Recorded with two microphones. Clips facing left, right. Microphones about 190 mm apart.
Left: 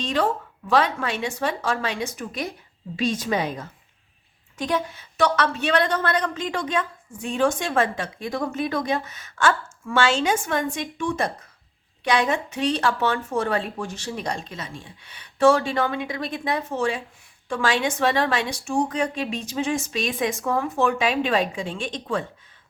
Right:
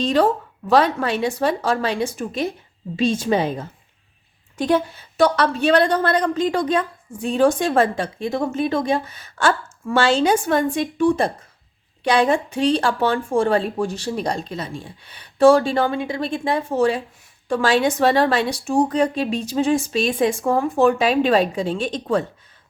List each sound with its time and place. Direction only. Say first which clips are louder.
0.0 s a woman's voice: right 6 dB; 35° right (ahead or behind)